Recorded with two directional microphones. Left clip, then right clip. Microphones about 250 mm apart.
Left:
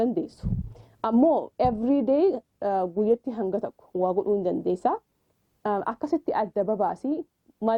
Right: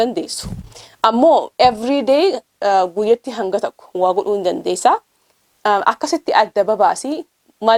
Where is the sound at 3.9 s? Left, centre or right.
Right.